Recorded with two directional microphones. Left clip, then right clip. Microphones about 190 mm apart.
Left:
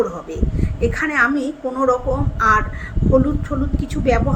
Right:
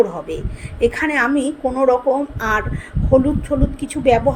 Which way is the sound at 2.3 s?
10° right (ahead or behind).